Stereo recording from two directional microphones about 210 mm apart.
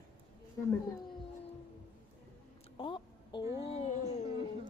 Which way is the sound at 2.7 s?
25° left (ahead or behind).